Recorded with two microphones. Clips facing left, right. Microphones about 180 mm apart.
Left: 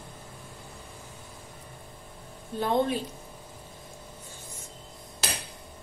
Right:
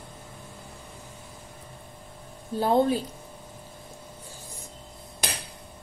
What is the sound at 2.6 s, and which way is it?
Speech, 35° right (ahead or behind).